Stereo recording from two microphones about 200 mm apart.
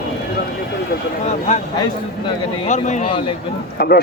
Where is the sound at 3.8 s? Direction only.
50° left (ahead or behind).